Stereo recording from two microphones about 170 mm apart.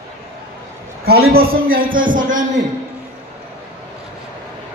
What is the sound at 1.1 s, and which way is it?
A man's voice, 65° right (ahead or behind).